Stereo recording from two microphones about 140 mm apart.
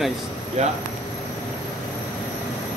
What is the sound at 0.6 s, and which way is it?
Speech, 55° right (ahead or behind).